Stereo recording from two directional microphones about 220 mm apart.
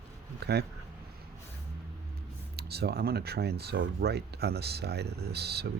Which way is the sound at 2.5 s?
45° right (ahead or behind).